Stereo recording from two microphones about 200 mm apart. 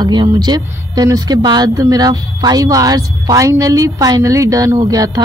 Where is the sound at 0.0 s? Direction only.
20° right (ahead or behind).